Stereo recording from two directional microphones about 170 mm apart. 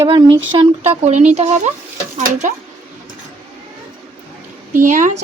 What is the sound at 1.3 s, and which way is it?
Speech, 40° right (ahead or behind).